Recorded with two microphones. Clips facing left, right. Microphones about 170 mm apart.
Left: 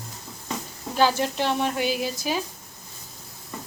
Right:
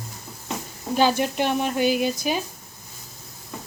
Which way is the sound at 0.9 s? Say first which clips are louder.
Right 2 dB; 15° right (ahead or behind).